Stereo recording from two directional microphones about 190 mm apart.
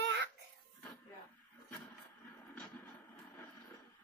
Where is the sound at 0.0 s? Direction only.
65° right (ahead or behind).